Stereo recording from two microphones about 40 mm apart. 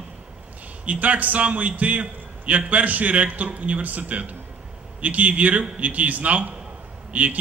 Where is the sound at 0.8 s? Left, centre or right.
Right.